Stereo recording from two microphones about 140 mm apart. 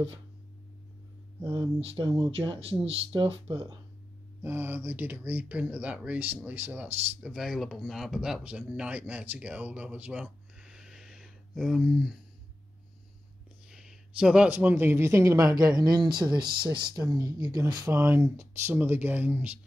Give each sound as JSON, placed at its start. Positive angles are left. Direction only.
{"t": 1.4, "sound": "speech", "side_deg": -25}
{"t": 1.8, "sound": "speech", "side_deg": -40}
{"t": 4.4, "sound": "speech", "side_deg": -15}
{"t": 13.7, "sound": "speech", "side_deg": -5}